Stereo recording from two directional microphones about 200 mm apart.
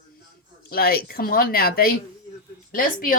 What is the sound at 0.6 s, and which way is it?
A woman's voice, 50° left (ahead or behind).